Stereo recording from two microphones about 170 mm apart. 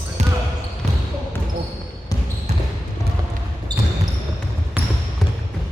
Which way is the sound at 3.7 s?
25° right (ahead or behind).